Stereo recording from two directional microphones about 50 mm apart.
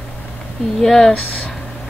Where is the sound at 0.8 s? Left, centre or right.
Centre.